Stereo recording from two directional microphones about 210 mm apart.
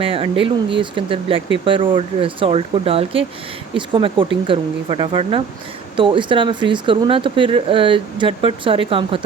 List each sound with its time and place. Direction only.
0.0 s speech: 25° right (ahead or behind)